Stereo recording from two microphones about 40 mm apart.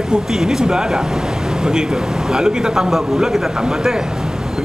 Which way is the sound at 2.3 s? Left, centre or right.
Centre.